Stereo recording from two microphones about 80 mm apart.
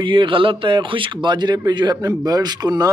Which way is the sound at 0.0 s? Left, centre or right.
Right.